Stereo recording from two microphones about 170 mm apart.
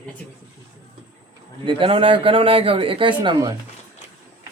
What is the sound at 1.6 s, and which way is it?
Speech, 30° right (ahead or behind).